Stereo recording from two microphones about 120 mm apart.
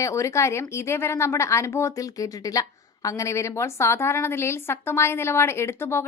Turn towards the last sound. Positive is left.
turn(degrees=20)  # may be behind; listen again after turning